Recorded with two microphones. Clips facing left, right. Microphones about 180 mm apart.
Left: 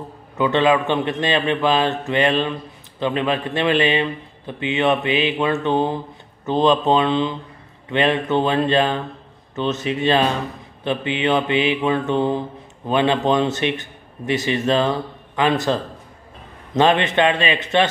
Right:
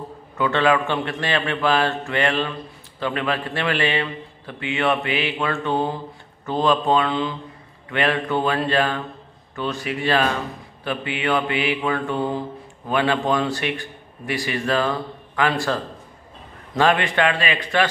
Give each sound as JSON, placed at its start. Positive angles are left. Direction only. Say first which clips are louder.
{"t": 0.4, "sound": "mantra", "louder": "left 2 dB", "side_deg": 20}